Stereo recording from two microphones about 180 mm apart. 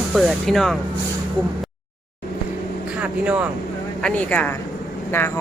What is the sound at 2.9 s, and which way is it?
Vehicle, 5° right (ahead or behind).